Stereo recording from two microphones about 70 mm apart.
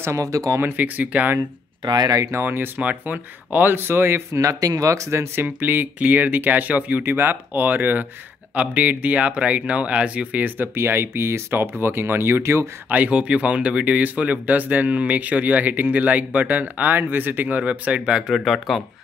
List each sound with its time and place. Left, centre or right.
0.0 s speech: right
0.6 s speech: right
1.9 s speech: right
2.4 s speech: right
4.4 s speech: right
12.9 s speech: centre
18.3 s speech: centre